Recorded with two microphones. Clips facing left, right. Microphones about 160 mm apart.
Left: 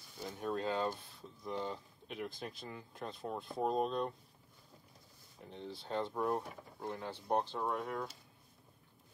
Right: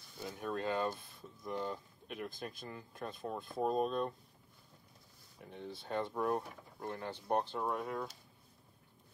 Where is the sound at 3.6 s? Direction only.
20° left (ahead or behind).